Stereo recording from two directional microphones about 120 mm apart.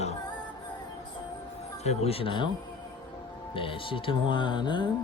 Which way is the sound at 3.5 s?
45° left (ahead or behind).